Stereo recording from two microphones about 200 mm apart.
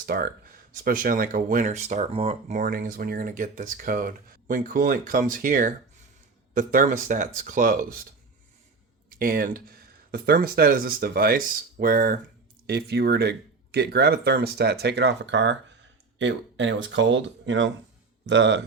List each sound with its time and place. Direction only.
0.0 s speech: 50° right (ahead or behind)
9.1 s speech: 45° right (ahead or behind); by 18.6 s 65° right (ahead or behind)